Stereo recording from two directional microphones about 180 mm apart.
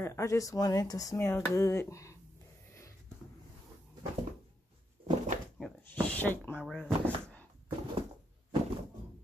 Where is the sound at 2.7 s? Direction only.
15° left (ahead or behind).